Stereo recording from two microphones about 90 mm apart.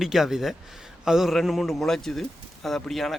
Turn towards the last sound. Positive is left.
turn(degrees=0)  # may be behind; listen again after turning